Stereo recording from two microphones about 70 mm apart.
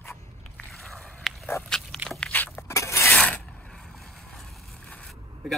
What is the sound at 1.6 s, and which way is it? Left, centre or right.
Dog, centre.